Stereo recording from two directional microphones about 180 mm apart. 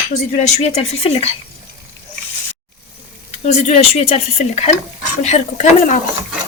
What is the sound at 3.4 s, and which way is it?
Speech, 35° left (ahead or behind).